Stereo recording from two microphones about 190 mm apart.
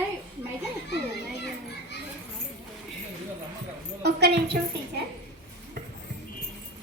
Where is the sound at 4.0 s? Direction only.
60° right (ahead or behind).